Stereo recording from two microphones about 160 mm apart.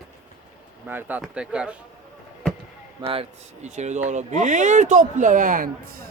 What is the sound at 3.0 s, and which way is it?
Speech, 35° right (ahead or behind).